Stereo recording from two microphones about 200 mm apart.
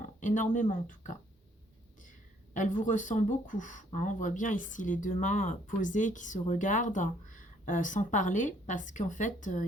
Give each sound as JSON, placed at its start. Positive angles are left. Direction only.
{"t": 0.2, "sound": "speech", "side_deg": 40}